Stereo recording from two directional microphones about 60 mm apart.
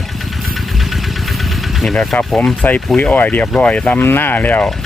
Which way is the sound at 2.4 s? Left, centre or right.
Left.